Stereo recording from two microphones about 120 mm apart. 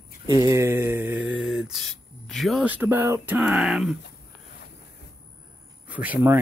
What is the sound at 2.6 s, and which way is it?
Speech, 15° right (ahead or behind).